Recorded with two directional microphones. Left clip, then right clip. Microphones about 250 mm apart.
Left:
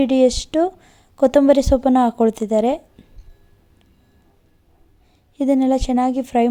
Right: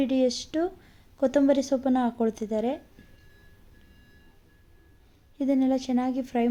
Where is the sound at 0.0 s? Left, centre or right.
Left.